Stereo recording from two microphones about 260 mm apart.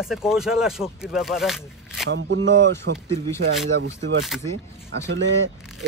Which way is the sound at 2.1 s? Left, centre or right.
Right.